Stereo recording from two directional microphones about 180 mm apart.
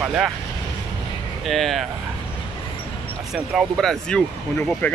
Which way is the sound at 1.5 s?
Centre (ahead or behind).